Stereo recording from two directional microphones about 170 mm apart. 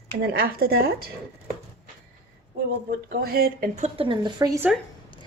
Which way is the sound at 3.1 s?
60° right (ahead or behind).